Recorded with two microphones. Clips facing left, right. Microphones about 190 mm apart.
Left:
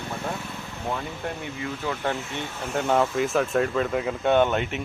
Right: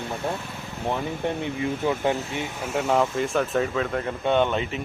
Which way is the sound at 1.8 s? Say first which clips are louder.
Right 4 dB; 20° right (ahead or behind).